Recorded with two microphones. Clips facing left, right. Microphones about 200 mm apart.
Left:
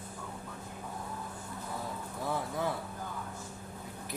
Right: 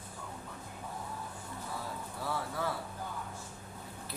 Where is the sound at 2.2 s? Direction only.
20° left (ahead or behind).